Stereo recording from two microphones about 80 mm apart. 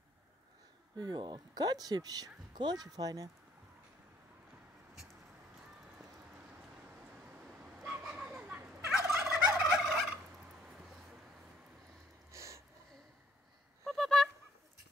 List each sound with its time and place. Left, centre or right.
0.9 s speech: right
7.2 s dog: centre
8.1 s children playing: centre
8.9 s fowl: centre
10.3 s a sound: centre
12.3 s a sound: right
13.8 s fowl: centre